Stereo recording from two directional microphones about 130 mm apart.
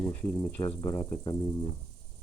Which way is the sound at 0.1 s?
15° left (ahead or behind).